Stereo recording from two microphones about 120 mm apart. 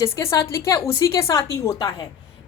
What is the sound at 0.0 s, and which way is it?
A woman's voice, 20° left (ahead or behind).